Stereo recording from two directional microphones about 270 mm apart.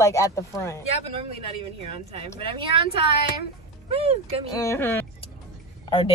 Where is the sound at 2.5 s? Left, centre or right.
Centre.